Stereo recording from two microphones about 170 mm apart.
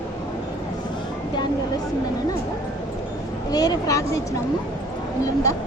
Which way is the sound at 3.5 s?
20° left (ahead or behind).